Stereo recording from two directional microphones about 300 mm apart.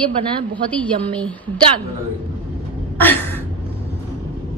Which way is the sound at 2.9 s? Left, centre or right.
Centre.